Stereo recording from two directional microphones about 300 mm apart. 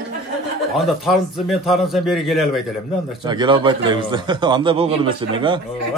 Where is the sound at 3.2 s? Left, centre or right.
Centre.